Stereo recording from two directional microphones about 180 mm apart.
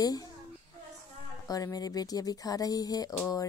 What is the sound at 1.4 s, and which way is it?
Speech, 20° left (ahead or behind).